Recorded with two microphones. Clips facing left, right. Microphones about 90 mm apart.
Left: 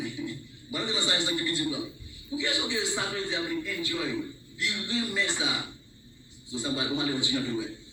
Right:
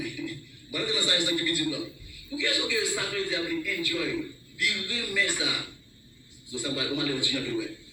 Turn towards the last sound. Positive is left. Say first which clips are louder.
# even
turn(degrees=25)  # may be behind; listen again after turning